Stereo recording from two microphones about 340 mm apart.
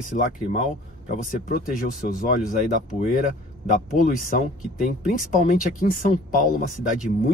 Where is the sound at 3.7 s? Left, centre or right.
Left.